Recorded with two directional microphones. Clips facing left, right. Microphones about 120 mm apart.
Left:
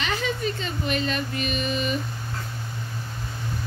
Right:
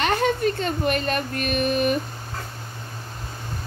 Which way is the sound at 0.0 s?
50° right (ahead or behind).